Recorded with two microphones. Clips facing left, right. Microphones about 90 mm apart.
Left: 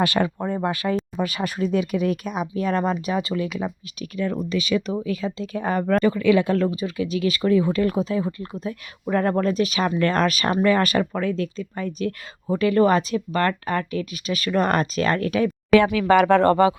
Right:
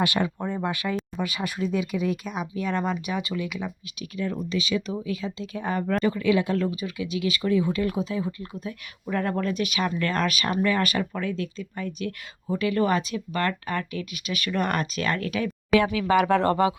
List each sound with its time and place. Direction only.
0.0 s speech: 50° left (ahead or behind)
4.2 s speech: 60° left (ahead or behind)
6.1 s speech: 70° left (ahead or behind)
6.4 s speech: 45° left (ahead or behind)
15.7 s speech: 65° left (ahead or behind)